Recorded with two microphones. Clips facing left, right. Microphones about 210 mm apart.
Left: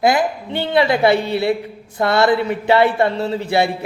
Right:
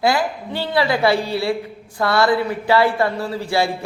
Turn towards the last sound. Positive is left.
turn(degrees=20)  # may be behind; listen again after turning